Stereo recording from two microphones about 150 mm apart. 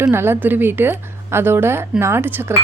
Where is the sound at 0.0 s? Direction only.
15° right (ahead or behind).